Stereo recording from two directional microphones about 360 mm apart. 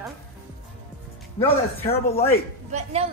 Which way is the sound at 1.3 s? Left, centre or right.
Centre.